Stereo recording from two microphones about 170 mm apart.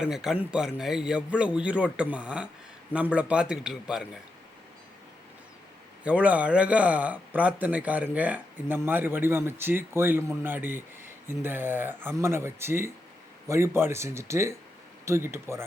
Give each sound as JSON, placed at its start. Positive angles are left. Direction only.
{"t": 0.0, "sound": "speech", "side_deg": -5}
{"t": 6.0, "sound": "speech", "side_deg": -10}